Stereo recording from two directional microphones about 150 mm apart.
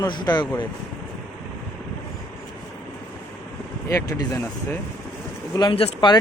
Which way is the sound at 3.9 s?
20° left (ahead or behind).